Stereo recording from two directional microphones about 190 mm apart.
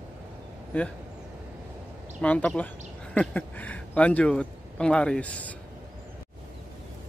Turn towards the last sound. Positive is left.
turn(degrees=5)  # may be behind; listen again after turning